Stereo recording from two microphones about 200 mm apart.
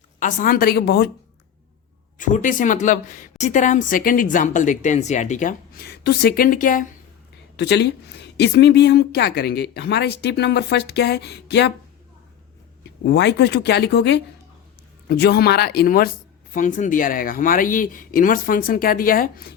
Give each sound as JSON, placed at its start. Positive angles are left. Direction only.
{"t": 0.2, "sound": "speech", "side_deg": 40}
{"t": 2.1, "sound": "a woman's voice", "side_deg": 40}
{"t": 7.5, "sound": "a woman's voice", "side_deg": 60}
{"t": 13.1, "sound": "a woman's voice", "side_deg": 60}